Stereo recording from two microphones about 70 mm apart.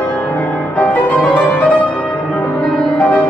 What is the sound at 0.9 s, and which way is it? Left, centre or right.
Music, left.